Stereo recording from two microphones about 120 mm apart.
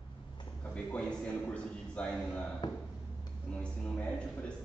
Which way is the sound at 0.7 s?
10° left (ahead or behind).